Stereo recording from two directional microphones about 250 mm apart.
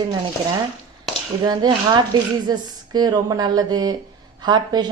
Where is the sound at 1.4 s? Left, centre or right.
Centre.